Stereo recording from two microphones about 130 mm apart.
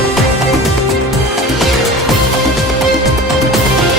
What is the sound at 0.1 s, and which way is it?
Music, centre (ahead or behind).